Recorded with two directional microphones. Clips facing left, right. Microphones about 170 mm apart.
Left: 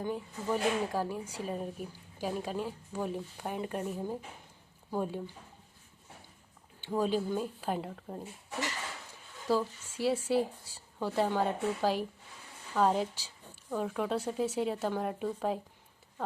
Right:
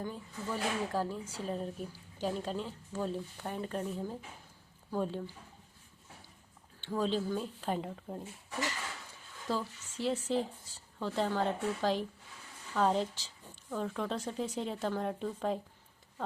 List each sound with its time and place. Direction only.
0.5 s a woman's voice: 15° left (ahead or behind)
6.8 s a woman's voice: 10° left (ahead or behind)
9.5 s a woman's voice: 10° left (ahead or behind)